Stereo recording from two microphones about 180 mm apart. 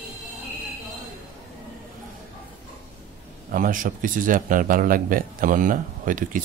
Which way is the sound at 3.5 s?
50° right (ahead or behind).